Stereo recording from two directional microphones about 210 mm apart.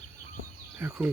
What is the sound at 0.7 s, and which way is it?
Speech, 10° right (ahead or behind).